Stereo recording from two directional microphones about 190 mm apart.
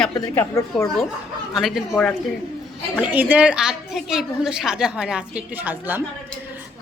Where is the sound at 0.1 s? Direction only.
15° left (ahead or behind).